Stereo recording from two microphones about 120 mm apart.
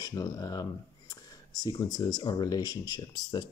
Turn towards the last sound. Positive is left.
turn(degrees=35)  # may be behind; listen again after turning